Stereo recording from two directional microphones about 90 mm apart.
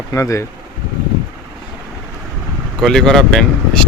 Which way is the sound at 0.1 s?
35° left (ahead or behind).